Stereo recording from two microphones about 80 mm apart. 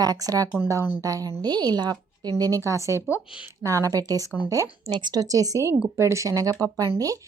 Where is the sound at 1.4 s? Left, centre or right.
Right.